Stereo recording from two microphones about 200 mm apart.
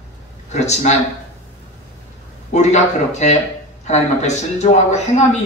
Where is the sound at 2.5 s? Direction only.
35° left (ahead or behind).